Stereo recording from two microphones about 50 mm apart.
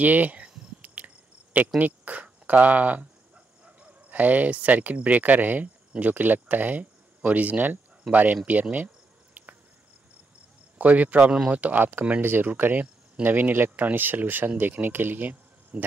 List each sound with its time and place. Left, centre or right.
0.0 s speech: right
0.8 s cricket: right
1.8 s speech: right
10.8 s speech: right
11.8 s speech: right